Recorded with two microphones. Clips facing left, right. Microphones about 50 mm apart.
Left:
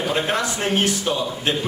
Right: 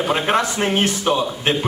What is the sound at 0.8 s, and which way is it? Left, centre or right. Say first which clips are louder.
Speech: right 3 dB; right.